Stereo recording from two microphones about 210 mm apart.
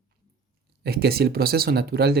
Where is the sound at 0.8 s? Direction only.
50° right (ahead or behind).